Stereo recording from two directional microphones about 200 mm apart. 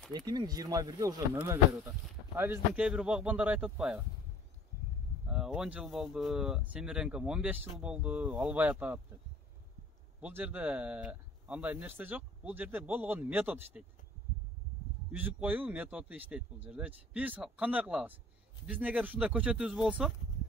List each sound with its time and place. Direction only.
0.1 s speech: 20° right (ahead or behind); by 4.0 s 5° right (ahead or behind)
5.3 s speech: 5° right (ahead or behind)
10.2 s speech: 10° right (ahead or behind)
15.0 s speech: 10° right (ahead or behind)